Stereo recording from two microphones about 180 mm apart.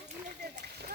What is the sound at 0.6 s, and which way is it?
Speech, 65° right (ahead or behind).